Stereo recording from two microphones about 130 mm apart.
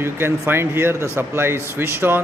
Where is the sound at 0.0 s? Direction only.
20° right (ahead or behind).